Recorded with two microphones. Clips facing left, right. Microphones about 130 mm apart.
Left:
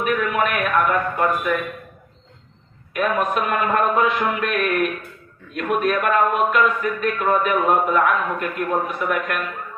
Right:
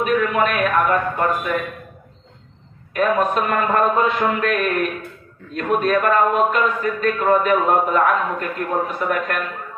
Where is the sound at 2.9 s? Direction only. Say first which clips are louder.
Right 3 dB; 30° right (ahead or behind).